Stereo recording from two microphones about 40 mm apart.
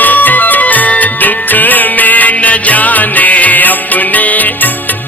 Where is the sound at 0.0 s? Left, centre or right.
Left.